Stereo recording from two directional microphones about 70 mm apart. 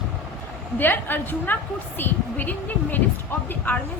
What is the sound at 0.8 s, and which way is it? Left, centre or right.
A woman's voice, left.